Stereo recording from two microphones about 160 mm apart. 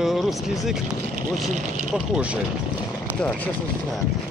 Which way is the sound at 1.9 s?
5° right (ahead or behind).